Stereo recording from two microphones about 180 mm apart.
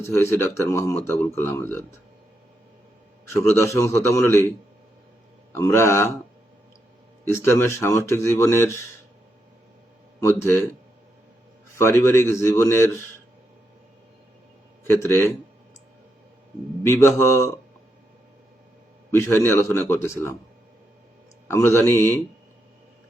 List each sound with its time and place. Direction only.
0.0 s speech: 15° left (ahead or behind)
3.3 s speech: 15° left (ahead or behind)
5.5 s speech: 15° left (ahead or behind)
7.3 s speech: 15° left (ahead or behind)
10.4 s speech: 15° left (ahead or behind)
11.8 s speech: 15° left (ahead or behind)
14.8 s speech: 15° left (ahead or behind)
16.8 s speech: 15° left (ahead or behind)
19.1 s speech: 15° left (ahead or behind)
21.4 s speech: 15° left (ahead or behind)